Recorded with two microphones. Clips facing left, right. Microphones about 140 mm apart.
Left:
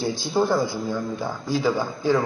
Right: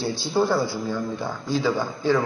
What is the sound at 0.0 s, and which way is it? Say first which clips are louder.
A man's voice: even; 15° left (ahead or behind).